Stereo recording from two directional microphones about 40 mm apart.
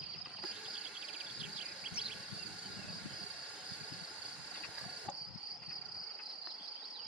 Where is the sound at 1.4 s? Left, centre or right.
Right.